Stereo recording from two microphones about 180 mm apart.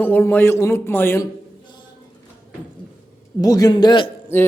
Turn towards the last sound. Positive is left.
turn(degrees=15)  # may be behind; listen again after turning